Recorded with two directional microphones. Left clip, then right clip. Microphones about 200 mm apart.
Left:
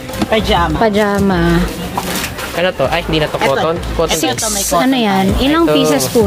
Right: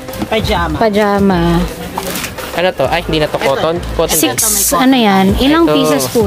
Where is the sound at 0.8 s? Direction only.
20° right (ahead or behind).